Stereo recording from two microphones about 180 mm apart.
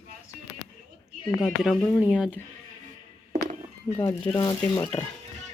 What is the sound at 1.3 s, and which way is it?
Speech, centre (ahead or behind).